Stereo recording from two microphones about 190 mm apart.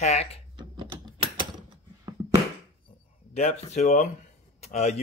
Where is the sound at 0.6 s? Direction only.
25° right (ahead or behind).